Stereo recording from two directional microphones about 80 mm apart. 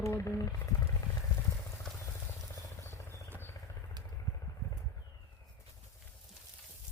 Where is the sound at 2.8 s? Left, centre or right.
Left.